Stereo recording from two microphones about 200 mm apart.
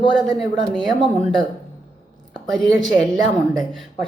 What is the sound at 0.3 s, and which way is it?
Speech, centre (ahead or behind).